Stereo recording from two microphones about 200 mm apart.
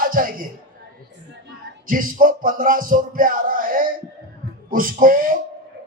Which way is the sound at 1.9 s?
45° right (ahead or behind).